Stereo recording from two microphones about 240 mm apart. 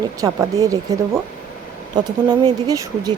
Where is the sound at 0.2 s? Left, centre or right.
Centre.